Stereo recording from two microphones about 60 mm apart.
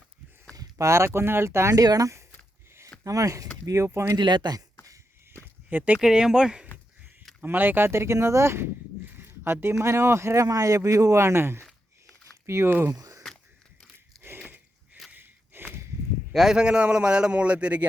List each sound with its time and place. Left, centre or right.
0.5 s a sound: right
0.9 s speech: right
1.7 s speech: right
3.8 s speech: right
5.6 s speech: right
6.0 s a man's voice: centre
7.4 s speech: right
7.9 s speech: right
12.9 s a sound: right
14.2 s a sound: right
16.3 s a man's voice: centre